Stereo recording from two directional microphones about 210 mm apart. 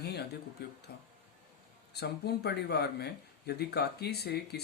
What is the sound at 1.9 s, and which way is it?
Speech, 50° left (ahead or behind).